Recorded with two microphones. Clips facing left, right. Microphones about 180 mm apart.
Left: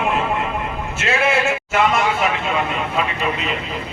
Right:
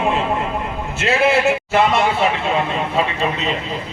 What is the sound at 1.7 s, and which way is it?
Speech, 30° right (ahead or behind).